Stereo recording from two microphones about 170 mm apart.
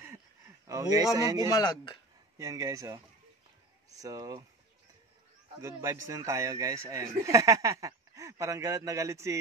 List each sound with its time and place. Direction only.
0.7 s speech: 20° right (ahead or behind)
1.5 s speech: 25° left (ahead or behind)
2.3 s a man's voice: 20° right (ahead or behind)
5.6 s a man's voice: 20° right (ahead or behind)